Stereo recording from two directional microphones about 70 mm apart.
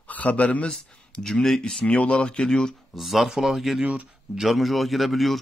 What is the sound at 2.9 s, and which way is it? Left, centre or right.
Speech, centre.